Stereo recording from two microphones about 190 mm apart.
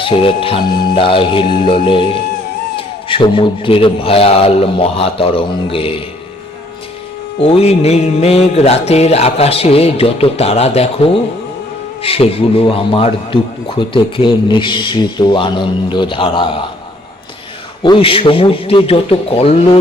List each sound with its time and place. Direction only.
0.0 s speech: 30° left (ahead or behind)
7.3 s music: 30° left (ahead or behind)
12.0 s speech: 30° left (ahead or behind)
17.8 s speech: 25° left (ahead or behind)